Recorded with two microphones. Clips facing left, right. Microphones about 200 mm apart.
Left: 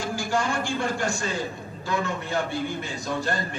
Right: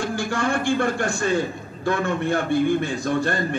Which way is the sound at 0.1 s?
55° right (ahead or behind).